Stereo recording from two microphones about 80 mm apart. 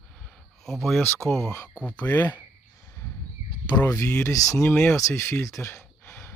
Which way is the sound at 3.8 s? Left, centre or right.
Left.